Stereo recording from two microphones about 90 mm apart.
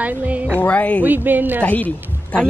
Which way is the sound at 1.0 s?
20° right (ahead or behind).